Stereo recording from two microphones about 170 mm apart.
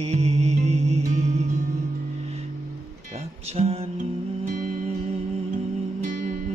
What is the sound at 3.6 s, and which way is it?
Music, 40° right (ahead or behind).